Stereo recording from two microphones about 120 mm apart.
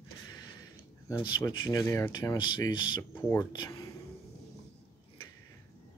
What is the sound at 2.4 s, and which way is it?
Speech, 40° left (ahead or behind).